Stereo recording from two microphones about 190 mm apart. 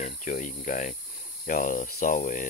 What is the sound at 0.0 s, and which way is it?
Cricket, 40° left (ahead or behind).